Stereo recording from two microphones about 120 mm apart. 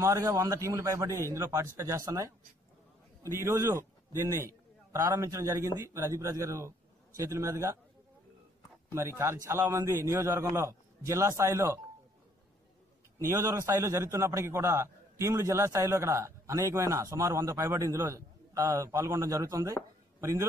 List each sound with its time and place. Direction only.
0.0 s a man's voice: 25° right (ahead or behind)
8.9 s a man's voice: 20° right (ahead or behind)
13.2 s a man's voice: 20° right (ahead or behind)